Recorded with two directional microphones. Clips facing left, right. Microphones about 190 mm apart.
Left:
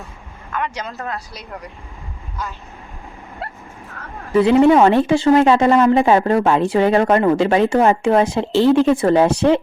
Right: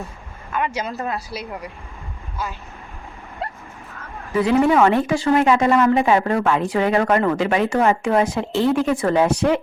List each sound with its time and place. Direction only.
0.5 s speech: 10° right (ahead or behind)
1.1 s speech: 5° right (ahead or behind)
3.4 s bow-wow: 5° left (ahead or behind)
4.4 s speech: 25° left (ahead or behind)